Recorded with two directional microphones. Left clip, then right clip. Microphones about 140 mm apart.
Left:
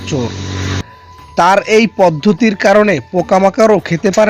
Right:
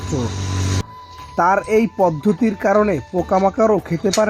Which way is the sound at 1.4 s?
30° left (ahead or behind).